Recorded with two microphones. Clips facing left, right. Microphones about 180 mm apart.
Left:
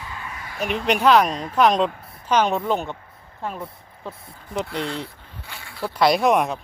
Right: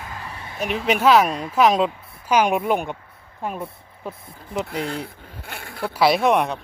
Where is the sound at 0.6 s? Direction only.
Centre (ahead or behind).